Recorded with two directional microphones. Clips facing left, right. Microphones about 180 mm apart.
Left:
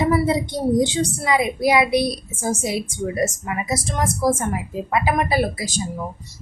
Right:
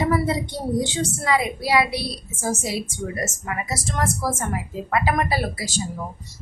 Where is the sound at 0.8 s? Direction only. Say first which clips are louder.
Left 5 dB; 20° left (ahead or behind).